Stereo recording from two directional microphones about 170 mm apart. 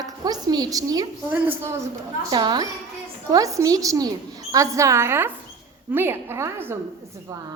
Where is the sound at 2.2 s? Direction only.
25° right (ahead or behind).